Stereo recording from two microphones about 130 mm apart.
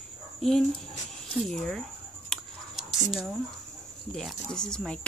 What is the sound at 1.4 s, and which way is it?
Speech, 5° left (ahead or behind).